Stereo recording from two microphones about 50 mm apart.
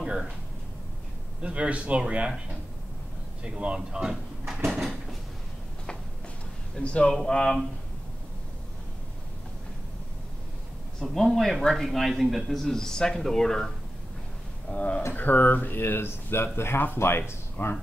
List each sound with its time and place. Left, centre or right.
0.0 s a sound: centre
1.4 s a man's voice: right
4.6 s cupboard open or close: centre
6.8 s a man's voice: left
11.0 s a man's voice: centre
14.7 s speech: left